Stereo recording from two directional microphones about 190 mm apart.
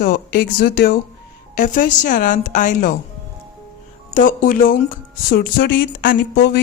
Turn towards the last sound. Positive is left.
turn(degrees=60)  # may be behind; listen again after turning